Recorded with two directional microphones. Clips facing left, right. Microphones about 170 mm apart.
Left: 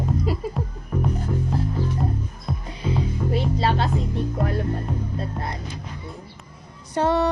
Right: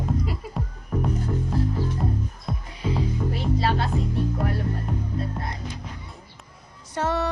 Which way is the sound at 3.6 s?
25° left (ahead or behind).